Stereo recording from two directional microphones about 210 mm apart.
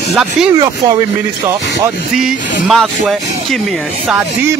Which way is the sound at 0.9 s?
15° right (ahead or behind).